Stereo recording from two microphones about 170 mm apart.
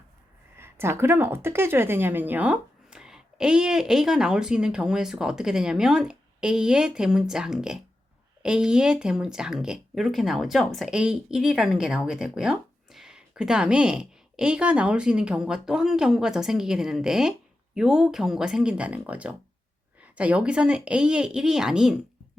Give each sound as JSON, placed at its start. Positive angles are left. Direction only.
{"t": 0.5, "sound": "speech", "side_deg": -15}